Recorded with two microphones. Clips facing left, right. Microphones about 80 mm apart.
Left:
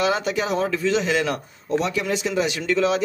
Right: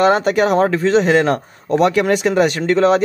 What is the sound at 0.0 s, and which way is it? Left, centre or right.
A man's voice, right.